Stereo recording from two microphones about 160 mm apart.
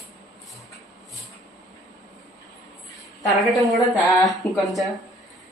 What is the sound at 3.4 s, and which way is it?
Speech, centre (ahead or behind).